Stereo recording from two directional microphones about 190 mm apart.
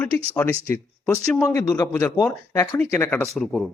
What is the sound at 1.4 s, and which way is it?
Speech, 20° left (ahead or behind).